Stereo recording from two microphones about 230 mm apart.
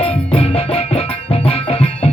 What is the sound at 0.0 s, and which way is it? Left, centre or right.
Music, left.